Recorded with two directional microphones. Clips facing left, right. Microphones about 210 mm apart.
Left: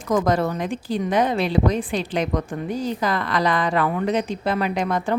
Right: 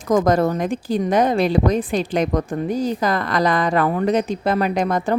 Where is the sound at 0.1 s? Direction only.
45° right (ahead or behind).